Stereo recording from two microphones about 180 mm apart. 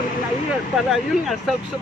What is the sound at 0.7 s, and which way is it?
Speech, centre (ahead or behind).